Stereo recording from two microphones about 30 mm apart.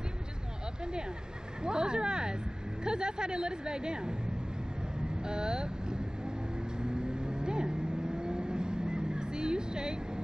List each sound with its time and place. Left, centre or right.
1.6 s a woman's voice: right
5.2 s vehicle: right